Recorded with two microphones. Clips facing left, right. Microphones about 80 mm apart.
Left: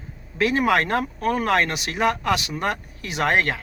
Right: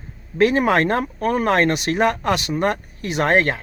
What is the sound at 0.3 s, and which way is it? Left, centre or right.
Speech, right.